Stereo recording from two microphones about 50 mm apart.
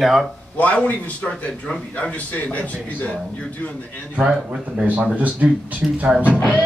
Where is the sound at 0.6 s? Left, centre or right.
Left.